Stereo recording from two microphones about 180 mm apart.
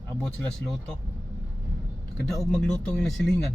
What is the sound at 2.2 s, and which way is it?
Speech, centre (ahead or behind).